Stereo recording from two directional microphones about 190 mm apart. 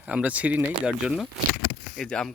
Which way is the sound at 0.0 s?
5° right (ahead or behind).